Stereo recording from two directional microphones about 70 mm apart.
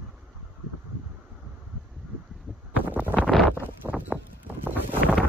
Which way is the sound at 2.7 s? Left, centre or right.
Right.